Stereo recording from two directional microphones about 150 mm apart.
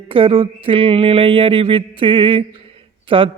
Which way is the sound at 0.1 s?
35° right (ahead or behind).